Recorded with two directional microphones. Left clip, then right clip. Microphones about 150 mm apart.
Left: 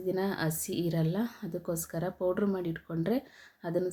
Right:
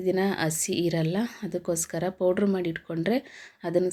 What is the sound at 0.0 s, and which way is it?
Speech, 20° right (ahead or behind).